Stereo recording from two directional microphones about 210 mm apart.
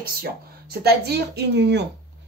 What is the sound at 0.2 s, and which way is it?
Speech, 50° right (ahead or behind).